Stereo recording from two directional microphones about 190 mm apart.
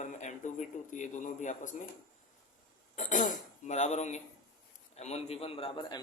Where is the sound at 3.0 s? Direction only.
40° left (ahead or behind).